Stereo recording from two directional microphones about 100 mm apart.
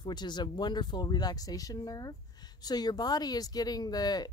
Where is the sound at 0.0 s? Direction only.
45° left (ahead or behind).